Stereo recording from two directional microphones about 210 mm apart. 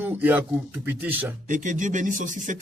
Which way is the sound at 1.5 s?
35° right (ahead or behind).